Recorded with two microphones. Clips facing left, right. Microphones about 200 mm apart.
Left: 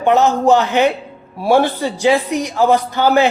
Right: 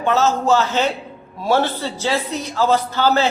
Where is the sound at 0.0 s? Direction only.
15° left (ahead or behind).